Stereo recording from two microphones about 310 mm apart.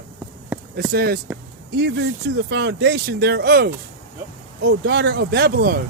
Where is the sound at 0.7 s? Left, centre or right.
Right.